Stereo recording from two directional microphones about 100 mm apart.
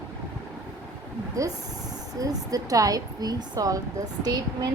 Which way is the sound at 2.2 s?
40° right (ahead or behind).